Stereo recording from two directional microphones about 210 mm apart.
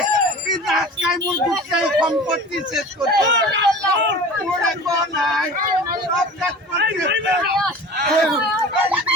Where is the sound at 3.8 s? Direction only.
60° right (ahead or behind).